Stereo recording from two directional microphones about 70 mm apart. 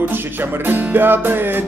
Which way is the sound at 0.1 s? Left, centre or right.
Right.